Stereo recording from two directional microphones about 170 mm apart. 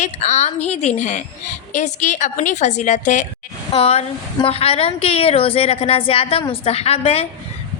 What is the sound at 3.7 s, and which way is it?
A woman's voice, 35° left (ahead or behind).